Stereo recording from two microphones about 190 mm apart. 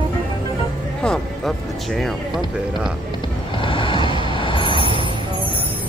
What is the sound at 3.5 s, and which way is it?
Vehicle, 25° left (ahead or behind).